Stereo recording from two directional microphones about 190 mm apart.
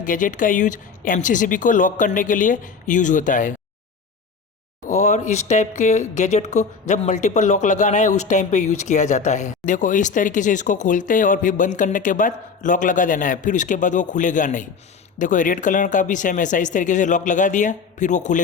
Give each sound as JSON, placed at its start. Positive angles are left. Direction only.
{"t": 0.0, "sound": "speech", "side_deg": 45}
{"t": 4.9, "sound": "speech", "side_deg": 40}